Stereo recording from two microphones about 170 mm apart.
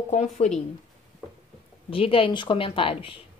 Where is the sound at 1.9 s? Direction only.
30° left (ahead or behind).